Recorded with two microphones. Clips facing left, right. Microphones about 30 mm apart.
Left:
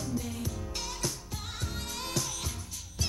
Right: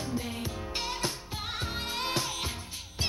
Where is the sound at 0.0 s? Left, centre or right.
Right.